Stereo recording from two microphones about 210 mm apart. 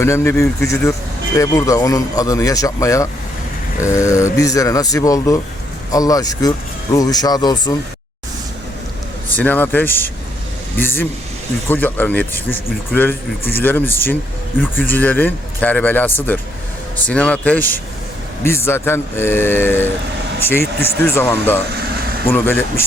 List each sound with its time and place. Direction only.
0.0 s speech: 10° left (ahead or behind)
9.3 s speech: 10° left (ahead or behind)
21.0 s speech: 10° left (ahead or behind)